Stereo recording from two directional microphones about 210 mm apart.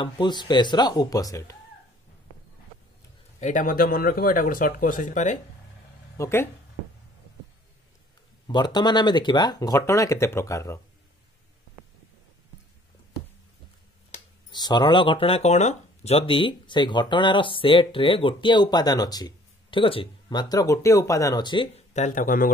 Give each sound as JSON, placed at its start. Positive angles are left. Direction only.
{"t": 0.0, "sound": "speech", "side_deg": 20}
{"t": 3.3, "sound": "speech", "side_deg": 35}
{"t": 6.1, "sound": "speech", "side_deg": 10}
{"t": 8.5, "sound": "speech", "side_deg": 20}
{"t": 14.5, "sound": "speech", "side_deg": 20}